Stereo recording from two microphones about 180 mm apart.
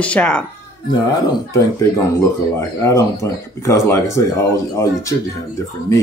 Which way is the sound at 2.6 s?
15° left (ahead or behind).